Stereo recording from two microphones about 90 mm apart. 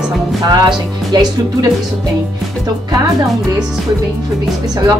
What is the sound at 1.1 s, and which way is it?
Speech, 50° right (ahead or behind).